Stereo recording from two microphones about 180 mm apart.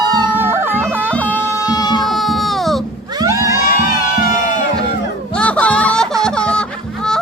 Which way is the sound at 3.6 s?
50° left (ahead or behind).